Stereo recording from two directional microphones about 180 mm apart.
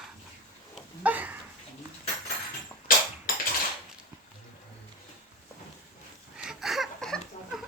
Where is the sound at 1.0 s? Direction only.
10° right (ahead or behind).